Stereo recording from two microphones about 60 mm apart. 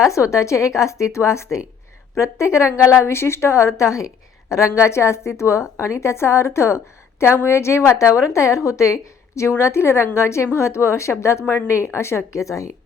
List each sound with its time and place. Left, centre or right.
0.1 s a woman's voice: left